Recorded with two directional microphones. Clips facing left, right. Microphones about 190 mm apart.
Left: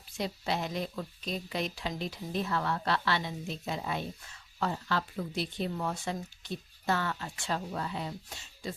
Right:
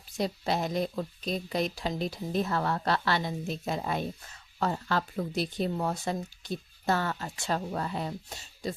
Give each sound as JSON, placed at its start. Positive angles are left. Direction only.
{"t": 0.2, "sound": "speech", "side_deg": -40}